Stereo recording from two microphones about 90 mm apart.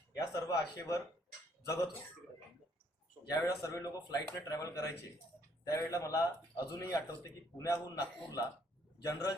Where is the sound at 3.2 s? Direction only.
40° left (ahead or behind).